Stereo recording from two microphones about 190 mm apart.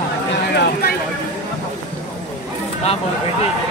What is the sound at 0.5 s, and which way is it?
Speech, 60° left (ahead or behind).